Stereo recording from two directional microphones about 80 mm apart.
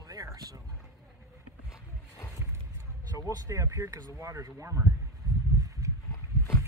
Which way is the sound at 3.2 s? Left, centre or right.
Right.